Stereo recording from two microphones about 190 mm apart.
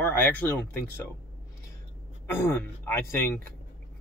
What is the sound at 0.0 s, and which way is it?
Speech, 10° left (ahead or behind).